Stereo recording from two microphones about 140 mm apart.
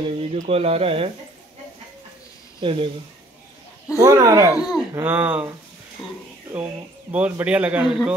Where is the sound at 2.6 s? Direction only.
40° right (ahead or behind).